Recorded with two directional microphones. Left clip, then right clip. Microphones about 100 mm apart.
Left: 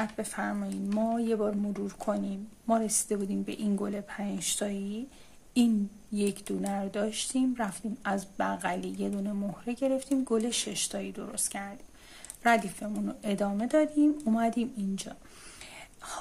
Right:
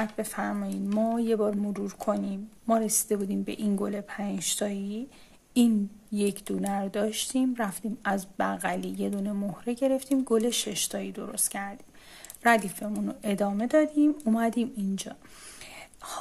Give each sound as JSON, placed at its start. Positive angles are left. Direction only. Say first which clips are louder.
{"t": 0.1, "sound": "speech", "louder": "right 2 dB", "side_deg": -40}
{"t": 6.1, "sound": "speech", "louder": "right 2 dB", "side_deg": -45}